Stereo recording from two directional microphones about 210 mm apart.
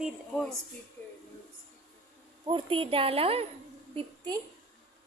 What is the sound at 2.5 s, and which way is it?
A woman's voice, 25° right (ahead or behind).